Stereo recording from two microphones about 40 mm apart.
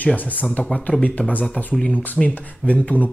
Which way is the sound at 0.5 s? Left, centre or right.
Left.